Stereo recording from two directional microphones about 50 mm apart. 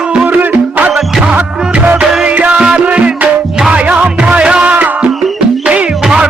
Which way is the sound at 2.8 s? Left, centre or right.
Right.